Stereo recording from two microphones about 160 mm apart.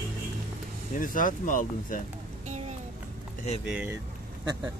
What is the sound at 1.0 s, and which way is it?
Speech, 55° left (ahead or behind).